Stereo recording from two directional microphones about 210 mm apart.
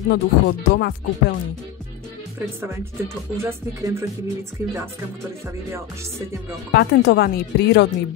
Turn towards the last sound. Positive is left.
turn(degrees=50)  # may be behind; listen again after turning